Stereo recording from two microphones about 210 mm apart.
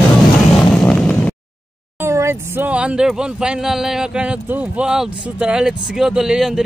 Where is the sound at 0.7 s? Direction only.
5° left (ahead or behind).